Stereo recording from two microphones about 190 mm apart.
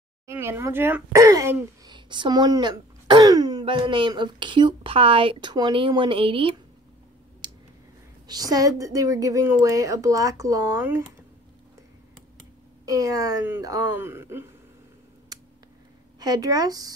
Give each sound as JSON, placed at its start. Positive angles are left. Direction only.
{"t": 0.3, "sound": "speech", "side_deg": -15}
{"t": 2.0, "sound": "speech", "side_deg": -25}
{"t": 7.4, "sound": "clicking", "side_deg": -25}
{"t": 8.3, "sound": "a woman's voice", "side_deg": -20}
{"t": 12.8, "sound": "a woman's voice", "side_deg": -20}
{"t": 16.2, "sound": "speech", "side_deg": -20}